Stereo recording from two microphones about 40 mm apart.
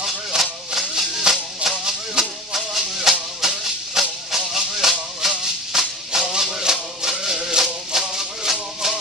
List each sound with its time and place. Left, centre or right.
0.4 s music: centre